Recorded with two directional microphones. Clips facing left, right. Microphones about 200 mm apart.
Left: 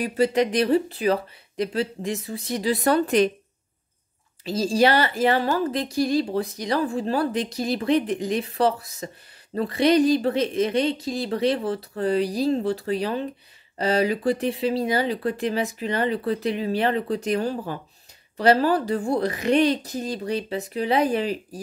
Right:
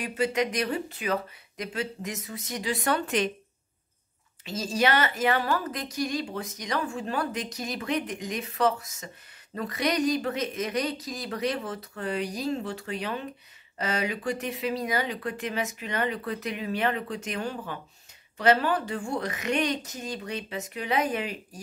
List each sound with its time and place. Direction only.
0.0 s speech: 35° left (ahead or behind)
4.5 s speech: 35° left (ahead or behind)